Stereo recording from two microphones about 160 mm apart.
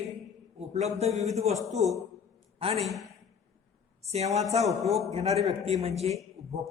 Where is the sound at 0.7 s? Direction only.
45° right (ahead or behind).